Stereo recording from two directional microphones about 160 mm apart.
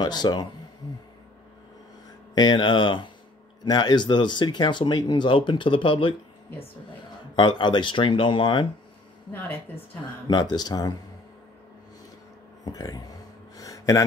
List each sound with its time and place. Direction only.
0.0 s speech: 25° left (ahead or behind)
2.3 s speech: 30° left (ahead or behind)
7.3 s speech: 30° left (ahead or behind)
9.3 s a woman's voice: 15° left (ahead or behind)
10.2 s speech: 25° left (ahead or behind)
12.6 s speech: 25° left (ahead or behind)
13.6 s a sound: 20° left (ahead or behind)